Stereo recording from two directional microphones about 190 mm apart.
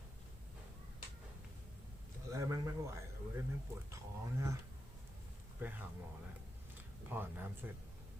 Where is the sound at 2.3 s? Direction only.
15° right (ahead or behind).